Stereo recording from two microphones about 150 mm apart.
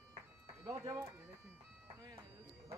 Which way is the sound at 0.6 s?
20° right (ahead or behind).